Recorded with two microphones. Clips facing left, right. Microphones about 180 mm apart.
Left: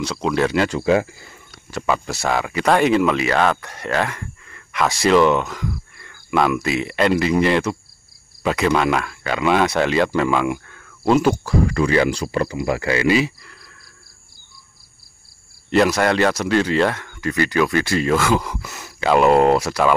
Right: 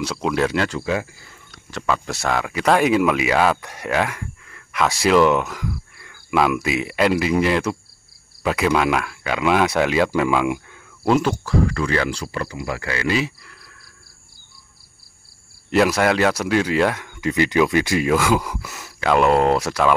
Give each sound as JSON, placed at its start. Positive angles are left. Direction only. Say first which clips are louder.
{"t": 0.0, "sound": "speech", "louder": "left 1 dB", "side_deg": -5}
{"t": 0.8, "sound": "speech", "louder": "left 6 dB", "side_deg": 30}
{"t": 1.5, "sound": "speech", "louder": "left 2 dB", "side_deg": 10}
{"t": 11.4, "sound": "speech", "louder": "left 2 dB", "side_deg": 15}
{"t": 13.1, "sound": "speech", "louder": "left 4 dB", "side_deg": 0}
{"t": 15.7, "sound": "speech", "louder": "left 1 dB", "side_deg": -5}